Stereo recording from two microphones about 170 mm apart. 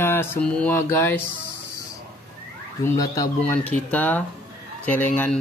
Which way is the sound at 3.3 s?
10° left (ahead or behind).